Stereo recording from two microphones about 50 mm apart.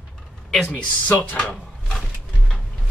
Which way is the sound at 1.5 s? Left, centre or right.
Centre.